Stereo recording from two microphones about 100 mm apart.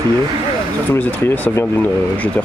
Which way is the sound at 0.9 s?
20° left (ahead or behind).